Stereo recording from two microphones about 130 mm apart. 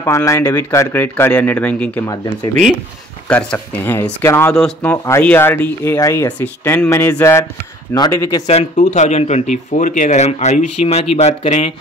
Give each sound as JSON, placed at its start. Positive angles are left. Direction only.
{"t": 0.0, "sound": "speech", "side_deg": 25}
{"t": 3.3, "sound": "speech", "side_deg": 10}
{"t": 4.6, "sound": "speech", "side_deg": 5}
{"t": 4.9, "sound": "speech", "side_deg": 20}
{"t": 8.5, "sound": "speech", "side_deg": 60}